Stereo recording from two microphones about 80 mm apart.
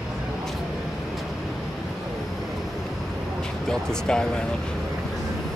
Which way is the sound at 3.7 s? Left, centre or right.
Centre.